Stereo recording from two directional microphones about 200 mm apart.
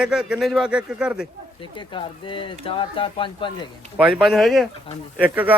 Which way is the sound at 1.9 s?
25° left (ahead or behind).